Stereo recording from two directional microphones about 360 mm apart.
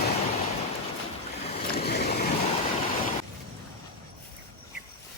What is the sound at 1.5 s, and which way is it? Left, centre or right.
Boat, centre.